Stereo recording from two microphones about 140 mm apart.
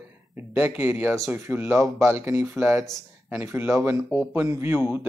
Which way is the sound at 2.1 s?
20° right (ahead or behind).